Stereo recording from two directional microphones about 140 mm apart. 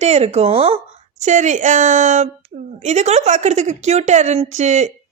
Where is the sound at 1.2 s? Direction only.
60° right (ahead or behind).